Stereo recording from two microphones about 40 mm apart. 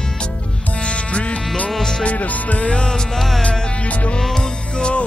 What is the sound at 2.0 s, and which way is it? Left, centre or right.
Music, left.